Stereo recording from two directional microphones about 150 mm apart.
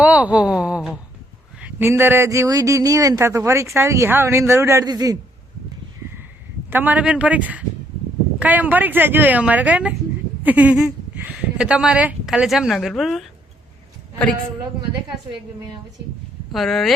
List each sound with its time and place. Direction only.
0.0 s a man's voice: 10° right (ahead or behind); by 5.1 s 25° right (ahead or behind)
6.7 s speech: 10° right (ahead or behind)
16.5 s speech: centre (ahead or behind)